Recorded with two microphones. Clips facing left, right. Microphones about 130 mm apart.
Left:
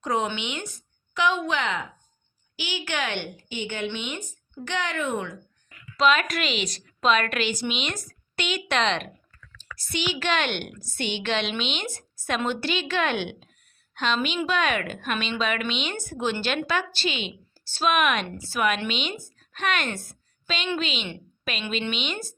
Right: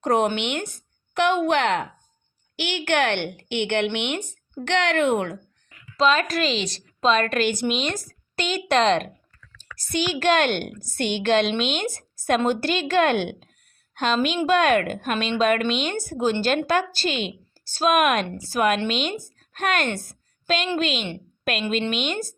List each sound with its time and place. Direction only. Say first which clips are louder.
0.0 s a woman's voice: right 6 dB; 60° right (ahead or behind)
6.0 s a woman's voice: right 2 dB; 35° right (ahead or behind)
7.4 s speech: right 5 dB; 55° right (ahead or behind)
7.8 s a woman's voice: right 5 dB; 40° right (ahead or behind)
19.4 s a sound: right 3 dB; 45° right (ahead or behind)
20.7 s speech: right 4 dB; 45° right (ahead or behind)